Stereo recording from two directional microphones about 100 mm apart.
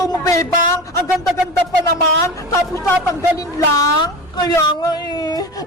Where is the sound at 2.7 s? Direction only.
30° left (ahead or behind).